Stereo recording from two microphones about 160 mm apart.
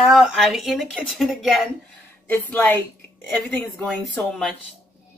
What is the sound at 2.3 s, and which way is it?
Speech, 10° left (ahead or behind).